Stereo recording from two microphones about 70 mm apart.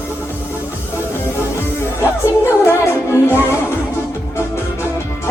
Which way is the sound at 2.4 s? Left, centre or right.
Left.